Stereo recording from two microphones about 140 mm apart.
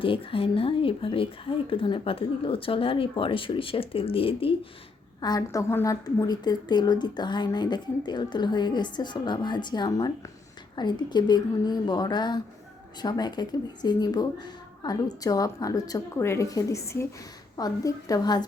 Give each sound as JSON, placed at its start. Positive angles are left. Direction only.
{"t": 0.0, "sound": "a woman's voice", "side_deg": 40}
{"t": 5.2, "sound": "a woman's voice", "side_deg": 25}